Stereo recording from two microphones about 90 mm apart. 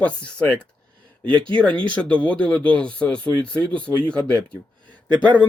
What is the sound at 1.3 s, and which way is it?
Speech, 65° right (ahead or behind).